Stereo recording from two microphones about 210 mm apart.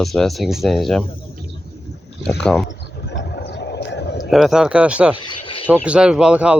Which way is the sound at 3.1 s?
55° left (ahead or behind).